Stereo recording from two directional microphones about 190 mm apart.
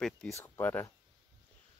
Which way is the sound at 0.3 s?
10° left (ahead or behind).